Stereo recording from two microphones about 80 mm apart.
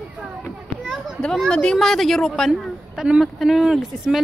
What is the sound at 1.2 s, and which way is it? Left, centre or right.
A woman's voice, centre.